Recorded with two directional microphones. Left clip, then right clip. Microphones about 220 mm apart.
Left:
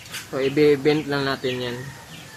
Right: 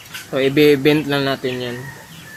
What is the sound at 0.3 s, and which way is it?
Speech, 40° right (ahead or behind).